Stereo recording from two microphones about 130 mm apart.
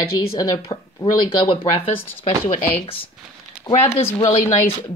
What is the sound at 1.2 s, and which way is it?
Speech, 40° left (ahead or behind).